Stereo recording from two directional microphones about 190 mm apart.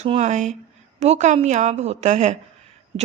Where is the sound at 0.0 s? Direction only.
35° right (ahead or behind).